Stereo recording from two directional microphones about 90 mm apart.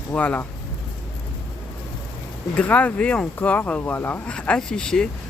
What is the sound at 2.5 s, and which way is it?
Speech, 15° left (ahead or behind).